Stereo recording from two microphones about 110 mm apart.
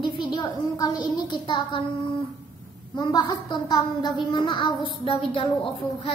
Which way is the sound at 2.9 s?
45° left (ahead or behind).